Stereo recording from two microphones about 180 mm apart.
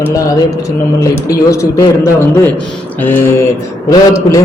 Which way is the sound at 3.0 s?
10° left (ahead or behind).